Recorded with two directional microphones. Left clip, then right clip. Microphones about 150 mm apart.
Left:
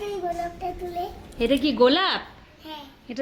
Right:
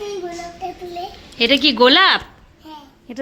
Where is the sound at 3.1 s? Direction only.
20° right (ahead or behind).